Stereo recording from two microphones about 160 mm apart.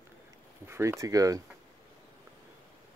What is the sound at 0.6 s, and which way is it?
Speech, 15° right (ahead or behind).